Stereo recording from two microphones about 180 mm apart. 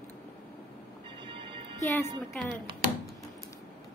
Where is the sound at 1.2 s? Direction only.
25° right (ahead or behind).